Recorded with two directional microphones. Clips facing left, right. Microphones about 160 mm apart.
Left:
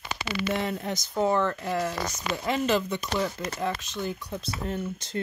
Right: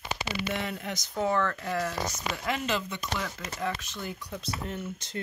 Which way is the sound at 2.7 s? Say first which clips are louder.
Left 6 dB; 45° left (ahead or behind).